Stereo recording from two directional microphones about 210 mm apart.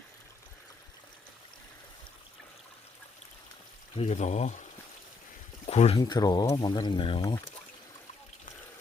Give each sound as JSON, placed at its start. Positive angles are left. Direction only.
{"t": 3.9, "sound": "speech", "side_deg": 30}
{"t": 5.6, "sound": "speech", "side_deg": 30}
{"t": 6.0, "sound": "speech", "side_deg": 20}